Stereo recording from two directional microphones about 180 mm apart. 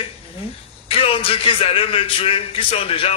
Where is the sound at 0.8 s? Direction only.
30° left (ahead or behind).